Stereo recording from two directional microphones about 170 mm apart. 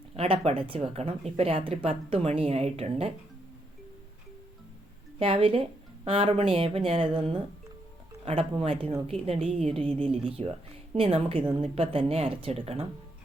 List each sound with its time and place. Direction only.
0.2 s speech: 35° right (ahead or behind)
5.2 s speech: 35° right (ahead or behind)